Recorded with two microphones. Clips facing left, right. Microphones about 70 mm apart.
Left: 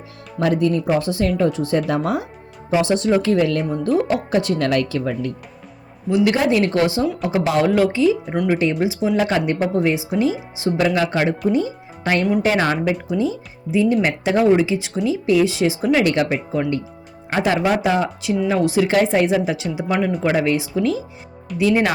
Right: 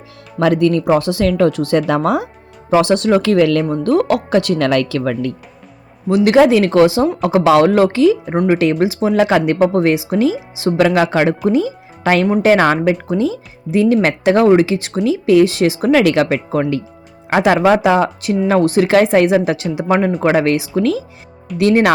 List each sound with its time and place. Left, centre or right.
0.3 s speech: right
0.9 s speech: right
6.1 s speech: right
8.3 s speech: right
8.5 s speech: right
10.6 s a woman's voice: right
18.9 s a woman's voice: right
20.2 s speech: right